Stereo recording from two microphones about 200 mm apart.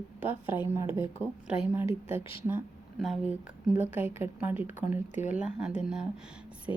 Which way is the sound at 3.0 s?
Centre (ahead or behind).